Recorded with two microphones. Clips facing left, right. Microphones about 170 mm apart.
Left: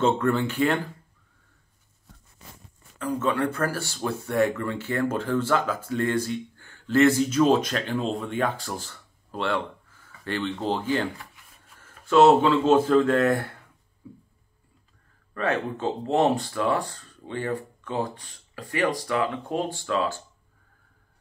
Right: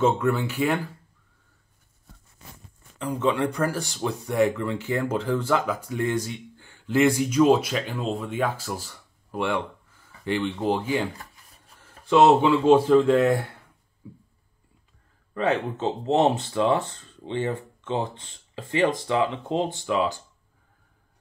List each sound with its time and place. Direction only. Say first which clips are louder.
0.0 s speech: even; 10° right (ahead or behind)
3.0 s speech: right 1 dB; 20° right (ahead or behind)
11.1 s rub: right 1 dB; 35° right (ahead or behind)
12.1 s speech: even; 15° right (ahead or behind)
12.9 s speech: right 2 dB; 5° right (ahead or behind)
15.3 s speech: right 2 dB; 20° right (ahead or behind)